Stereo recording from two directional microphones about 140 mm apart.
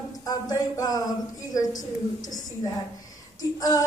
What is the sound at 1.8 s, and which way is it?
Speech, 65° left (ahead or behind).